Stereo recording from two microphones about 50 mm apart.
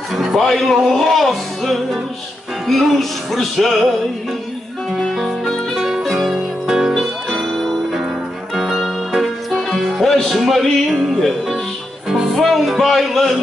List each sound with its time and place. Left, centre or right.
0.1 s music: centre
5.0 s music: centre
6.9 s music: centre